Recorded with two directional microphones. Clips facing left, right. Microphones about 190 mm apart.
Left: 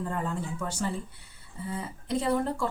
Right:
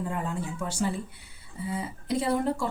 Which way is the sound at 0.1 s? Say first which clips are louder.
Even; 10° right (ahead or behind).